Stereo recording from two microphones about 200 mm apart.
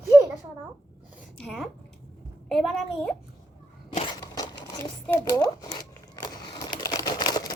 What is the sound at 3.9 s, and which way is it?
Crumpling, 25° left (ahead or behind).